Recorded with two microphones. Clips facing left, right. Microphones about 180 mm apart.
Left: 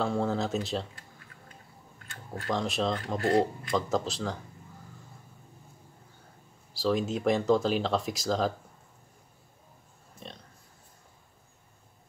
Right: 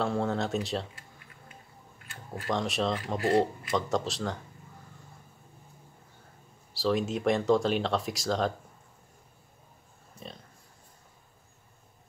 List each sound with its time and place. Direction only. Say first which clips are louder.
0.0 s speech: even; centre (ahead or behind)
2.0 s speech: even; centre (ahead or behind)
6.7 s speech: even; centre (ahead or behind)
10.2 s a sound: right 1 dB; 5° right (ahead or behind)